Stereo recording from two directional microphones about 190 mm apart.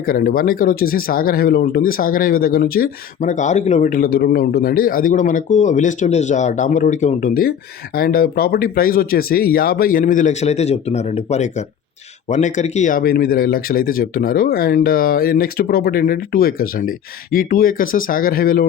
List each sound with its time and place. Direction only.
0.0 s speech: 50° left (ahead or behind)